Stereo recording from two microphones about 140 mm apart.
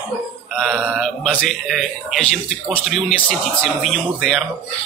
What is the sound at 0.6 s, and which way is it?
Speech, 5° right (ahead or behind).